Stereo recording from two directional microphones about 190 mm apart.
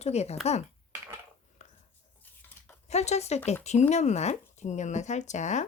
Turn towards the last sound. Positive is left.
turn(degrees=40)  # may be behind; listen again after turning